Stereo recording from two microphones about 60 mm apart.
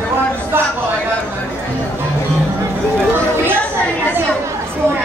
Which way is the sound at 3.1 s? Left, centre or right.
Right.